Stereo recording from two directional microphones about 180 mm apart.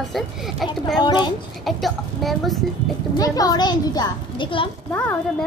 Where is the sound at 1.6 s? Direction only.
Centre (ahead or behind).